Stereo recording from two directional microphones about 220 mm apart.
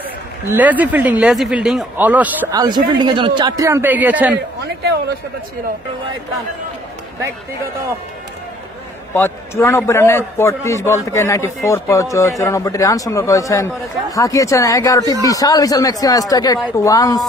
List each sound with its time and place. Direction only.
0.5 s speech: 5° right (ahead or behind)
4.8 s speech: 45° right (ahead or behind)
9.1 s a man's voice: 10° left (ahead or behind)